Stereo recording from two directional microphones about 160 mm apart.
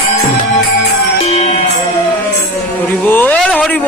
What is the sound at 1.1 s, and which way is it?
Music, 40° left (ahead or behind).